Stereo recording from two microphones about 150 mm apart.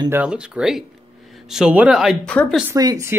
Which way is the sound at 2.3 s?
10° left (ahead or behind).